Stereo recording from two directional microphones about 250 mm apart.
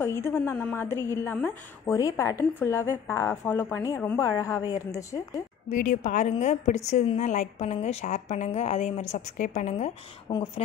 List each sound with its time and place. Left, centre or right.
0.0 s a woman's voice: centre
5.7 s a woman's voice: left